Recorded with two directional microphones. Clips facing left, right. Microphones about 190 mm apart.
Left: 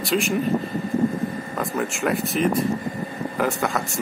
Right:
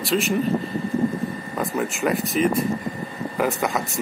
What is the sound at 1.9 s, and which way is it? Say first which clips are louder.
Speech: right 1 dB; centre (ahead or behind).